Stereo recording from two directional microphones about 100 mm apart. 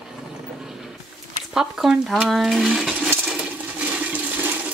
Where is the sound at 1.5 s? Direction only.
5° right (ahead or behind).